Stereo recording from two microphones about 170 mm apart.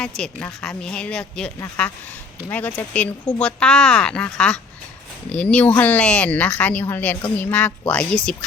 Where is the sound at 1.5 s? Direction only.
15° left (ahead or behind).